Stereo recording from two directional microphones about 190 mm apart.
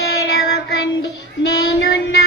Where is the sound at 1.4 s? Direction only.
60° left (ahead or behind).